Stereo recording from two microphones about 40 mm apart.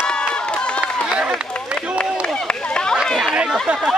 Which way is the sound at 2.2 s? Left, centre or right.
Left.